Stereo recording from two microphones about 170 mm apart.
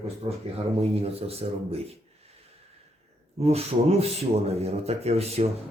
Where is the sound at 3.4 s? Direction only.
40° right (ahead or behind).